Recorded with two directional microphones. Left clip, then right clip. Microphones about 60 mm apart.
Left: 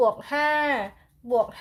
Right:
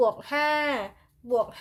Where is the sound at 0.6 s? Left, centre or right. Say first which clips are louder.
Left 3 dB; right.